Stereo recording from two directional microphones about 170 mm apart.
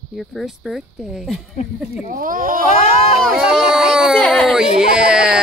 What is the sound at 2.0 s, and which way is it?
Speech, 55° right (ahead or behind).